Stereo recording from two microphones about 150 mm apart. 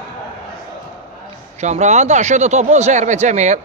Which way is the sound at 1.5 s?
50° right (ahead or behind).